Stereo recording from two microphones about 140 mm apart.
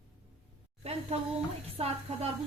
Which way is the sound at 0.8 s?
45° right (ahead or behind).